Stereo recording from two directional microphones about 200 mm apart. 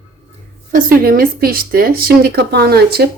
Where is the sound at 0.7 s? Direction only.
45° right (ahead or behind).